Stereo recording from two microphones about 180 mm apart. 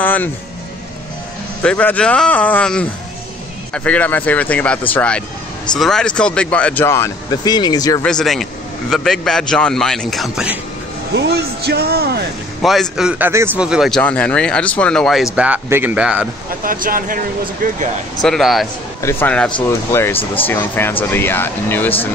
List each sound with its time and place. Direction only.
0.0 s music: 10° left (ahead or behind)
1.6 s speech: 5° left (ahead or behind)
8.0 s speech: 5° left (ahead or behind)
11.1 s speech: 70° right (ahead or behind)
12.6 s speech: centre (ahead or behind)
16.6 s speech: 50° right (ahead or behind)
18.2 s speech: centre (ahead or behind)
19.0 s speech: 10° left (ahead or behind)